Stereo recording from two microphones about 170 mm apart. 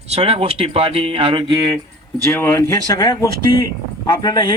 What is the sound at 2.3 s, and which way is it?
Speech, 15° left (ahead or behind).